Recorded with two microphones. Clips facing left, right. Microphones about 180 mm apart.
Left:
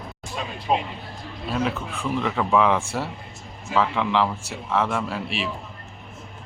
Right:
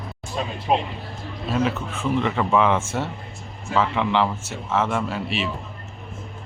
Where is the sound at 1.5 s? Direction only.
Centre (ahead or behind).